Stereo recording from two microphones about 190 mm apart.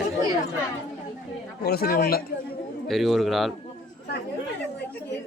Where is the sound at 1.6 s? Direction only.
55° left (ahead or behind).